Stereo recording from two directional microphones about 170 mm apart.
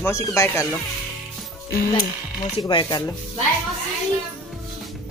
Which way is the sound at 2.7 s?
25° left (ahead or behind).